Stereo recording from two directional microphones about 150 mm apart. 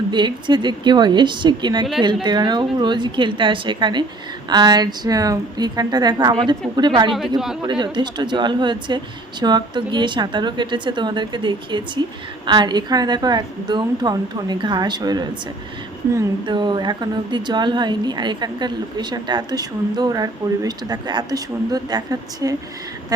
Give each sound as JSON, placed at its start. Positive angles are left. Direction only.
{"t": 0.1, "sound": "speech", "side_deg": -30}
{"t": 7.1, "sound": "speech", "side_deg": 0}
{"t": 7.7, "sound": "speech", "side_deg": -30}
{"t": 16.5, "sound": "speech", "side_deg": -30}